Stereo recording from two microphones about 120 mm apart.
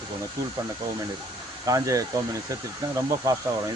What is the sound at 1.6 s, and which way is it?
Speech, 30° right (ahead or behind).